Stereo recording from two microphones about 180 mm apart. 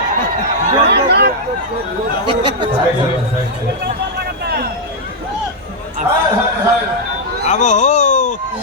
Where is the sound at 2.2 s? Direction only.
25° right (ahead or behind).